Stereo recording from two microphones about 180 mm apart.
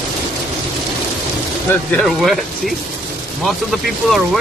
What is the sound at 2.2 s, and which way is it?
Speech, centre (ahead or behind).